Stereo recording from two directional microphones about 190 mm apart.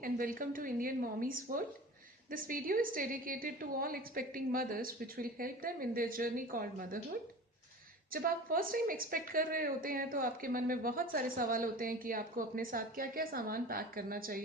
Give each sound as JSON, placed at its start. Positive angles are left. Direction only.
{"t": 0.0, "sound": "a woman's voice", "side_deg": -50}